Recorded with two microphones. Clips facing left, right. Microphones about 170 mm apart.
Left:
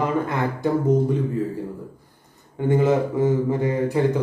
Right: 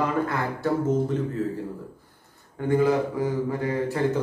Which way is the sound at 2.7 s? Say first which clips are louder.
Left 2 dB; 20° left (ahead or behind).